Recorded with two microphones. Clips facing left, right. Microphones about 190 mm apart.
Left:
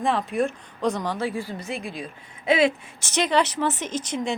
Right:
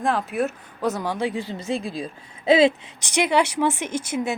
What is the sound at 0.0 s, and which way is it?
Speech, centre (ahead or behind).